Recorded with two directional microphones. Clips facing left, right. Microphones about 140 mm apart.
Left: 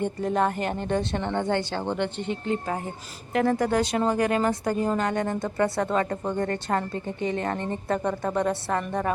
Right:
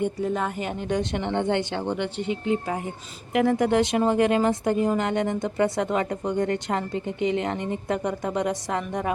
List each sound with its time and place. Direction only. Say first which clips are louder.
0.0 s speech: left 1 dB; 5° right (ahead or behind)
0.8 s speech: even; 15° right (ahead or behind)